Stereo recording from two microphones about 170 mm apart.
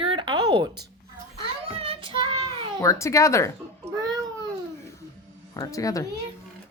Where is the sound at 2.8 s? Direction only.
15° left (ahead or behind).